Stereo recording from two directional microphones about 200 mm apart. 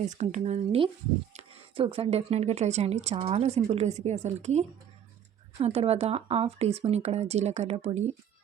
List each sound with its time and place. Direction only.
0.1 s speech: 35° right (ahead or behind)